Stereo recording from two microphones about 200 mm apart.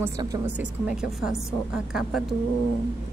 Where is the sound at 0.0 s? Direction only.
15° right (ahead or behind).